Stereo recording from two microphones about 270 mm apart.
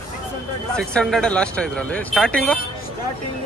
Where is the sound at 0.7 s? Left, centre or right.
Centre.